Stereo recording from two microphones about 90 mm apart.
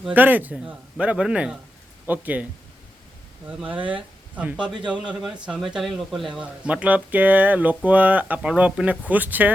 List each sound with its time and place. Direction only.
0.1 s speech: 20° right (ahead or behind); by 6.2 s centre (ahead or behind)
6.3 s speech: 15° right (ahead or behind)